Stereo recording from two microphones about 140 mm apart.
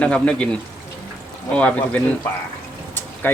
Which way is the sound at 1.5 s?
10° left (ahead or behind).